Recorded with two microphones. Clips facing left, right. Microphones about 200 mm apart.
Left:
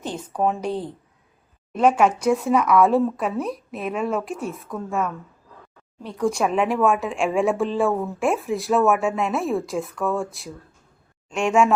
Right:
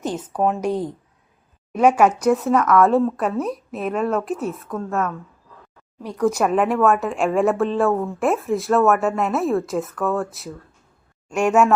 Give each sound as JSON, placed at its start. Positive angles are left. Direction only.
{"t": 0.0, "sound": "speech", "side_deg": -10}
{"t": 1.7, "sound": "a woman's voice", "side_deg": -10}
{"t": 6.3, "sound": "a woman's voice", "side_deg": -5}